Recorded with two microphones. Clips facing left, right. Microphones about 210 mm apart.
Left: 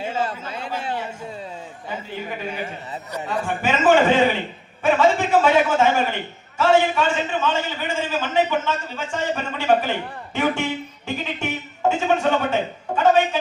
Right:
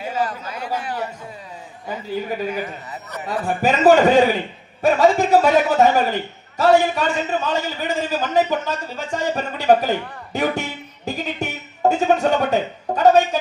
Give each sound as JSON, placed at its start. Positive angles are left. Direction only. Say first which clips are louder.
{"t": 0.2, "sound": "speech", "louder": "right 2 dB", "side_deg": 25}
{"t": 3.2, "sound": "a man's voice", "louder": "right 4 dB", "side_deg": -40}